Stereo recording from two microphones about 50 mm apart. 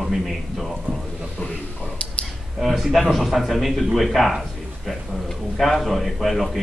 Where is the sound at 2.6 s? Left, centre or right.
Centre.